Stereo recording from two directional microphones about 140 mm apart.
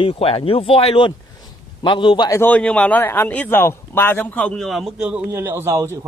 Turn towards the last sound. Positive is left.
turn(degrees=-20)  # may be behind; listen again after turning